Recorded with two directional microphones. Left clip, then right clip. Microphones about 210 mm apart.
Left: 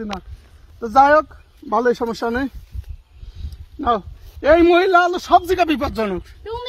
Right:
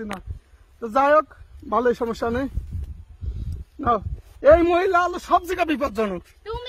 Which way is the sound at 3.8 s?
45° right (ahead or behind).